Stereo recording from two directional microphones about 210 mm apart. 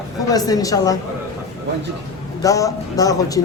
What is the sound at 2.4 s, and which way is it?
Speech, 15° left (ahead or behind).